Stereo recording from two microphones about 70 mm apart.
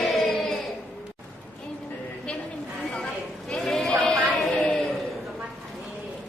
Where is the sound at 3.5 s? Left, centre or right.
Centre.